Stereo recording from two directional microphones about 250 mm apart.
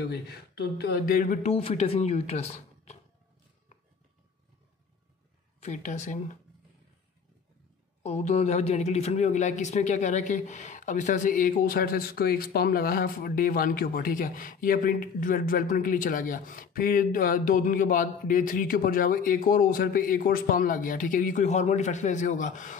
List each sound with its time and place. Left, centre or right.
0.0 s speech: left
5.6 s speech: left
8.0 s speech: left